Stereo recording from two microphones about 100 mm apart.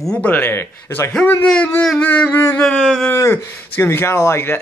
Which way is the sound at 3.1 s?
25° left (ahead or behind).